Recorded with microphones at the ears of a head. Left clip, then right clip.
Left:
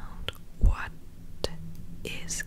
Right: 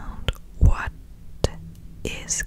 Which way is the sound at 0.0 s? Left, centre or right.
Right.